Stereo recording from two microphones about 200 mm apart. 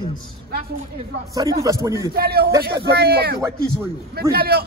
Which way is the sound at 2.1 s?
50° right (ahead or behind).